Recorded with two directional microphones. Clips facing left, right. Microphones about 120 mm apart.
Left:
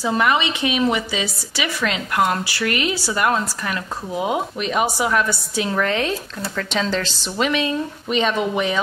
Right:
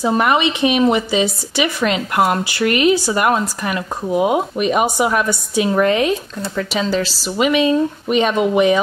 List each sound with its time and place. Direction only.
0.0 s speech: 25° right (ahead or behind)